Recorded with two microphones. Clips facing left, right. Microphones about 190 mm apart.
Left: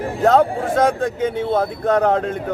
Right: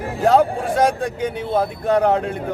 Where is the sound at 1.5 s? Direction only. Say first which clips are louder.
Right 1 dB; 10° right (ahead or behind).